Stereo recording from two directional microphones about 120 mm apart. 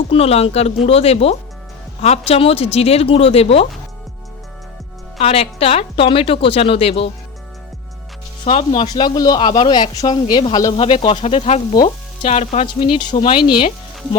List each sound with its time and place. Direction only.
0.1 s speech: 55° left (ahead or behind)
5.2 s a woman's voice: 55° left (ahead or behind)
8.4 s a woman's voice: 50° left (ahead or behind)
9.0 s speech: 35° left (ahead or behind)
10.8 s a woman's voice: 50° left (ahead or behind)
11.2 s speech: 65° left (ahead or behind)
12.6 s speech: 40° left (ahead or behind)